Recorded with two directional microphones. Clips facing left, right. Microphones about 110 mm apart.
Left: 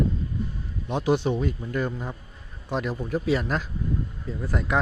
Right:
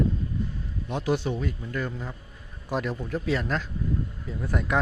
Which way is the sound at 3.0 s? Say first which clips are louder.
Left 3 dB; 10° left (ahead or behind).